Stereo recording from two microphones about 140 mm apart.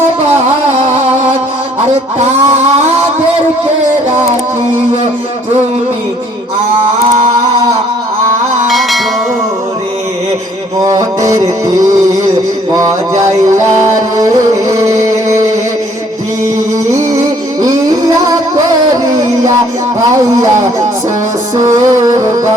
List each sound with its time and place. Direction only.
2.1 s a sound: 55° right (ahead or behind)
8.7 s music: centre (ahead or behind)
10.8 s a sound: 25° right (ahead or behind)
13.6 s music: 20° right (ahead or behind)
16.9 s music: 25° right (ahead or behind)
21.8 s music: 25° right (ahead or behind)